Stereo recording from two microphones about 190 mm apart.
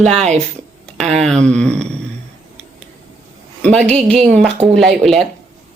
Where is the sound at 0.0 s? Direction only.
Centre (ahead or behind).